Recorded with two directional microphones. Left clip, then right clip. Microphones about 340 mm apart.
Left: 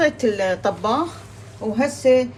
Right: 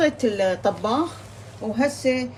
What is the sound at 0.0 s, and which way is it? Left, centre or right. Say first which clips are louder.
A woman's voice: left 2 dB; left.